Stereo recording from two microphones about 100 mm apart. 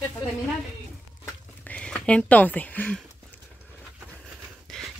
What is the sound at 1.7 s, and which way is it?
Speech, 10° left (ahead or behind).